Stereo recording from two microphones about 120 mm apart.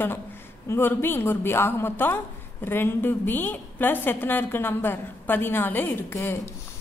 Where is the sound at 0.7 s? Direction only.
20° left (ahead or behind).